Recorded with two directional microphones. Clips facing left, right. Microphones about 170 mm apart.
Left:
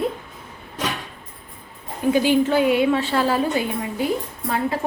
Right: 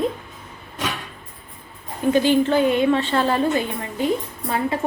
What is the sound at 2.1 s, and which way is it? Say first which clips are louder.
A woman's voice: right 1 dB; 10° left (ahead or behind).